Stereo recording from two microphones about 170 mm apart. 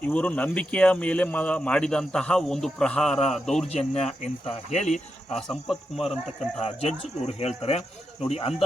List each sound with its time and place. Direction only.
0.0 s speech: 5° left (ahead or behind)
3.7 s speech: 40° left (ahead or behind)
5.4 s speech: centre (ahead or behind)
6.6 s speech: 35° left (ahead or behind)